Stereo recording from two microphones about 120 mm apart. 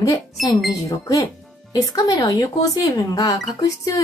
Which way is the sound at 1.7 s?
30° left (ahead or behind).